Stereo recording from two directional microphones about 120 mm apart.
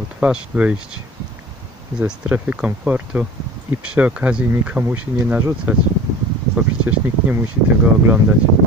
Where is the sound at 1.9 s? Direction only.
10° right (ahead or behind).